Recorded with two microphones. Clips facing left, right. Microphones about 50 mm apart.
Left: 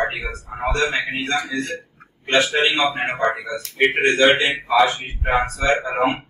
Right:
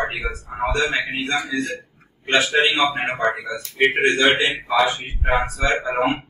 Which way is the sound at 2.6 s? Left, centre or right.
Left.